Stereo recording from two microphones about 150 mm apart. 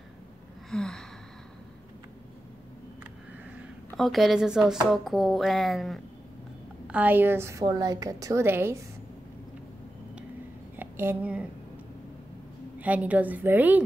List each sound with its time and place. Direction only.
0.7 s speech: 5° left (ahead or behind)
3.9 s speech: centre (ahead or behind)
6.9 s a woman's voice: 10° right (ahead or behind)
10.8 s speech: 15° right (ahead or behind)
12.7 s a woman's voice: 10° right (ahead or behind)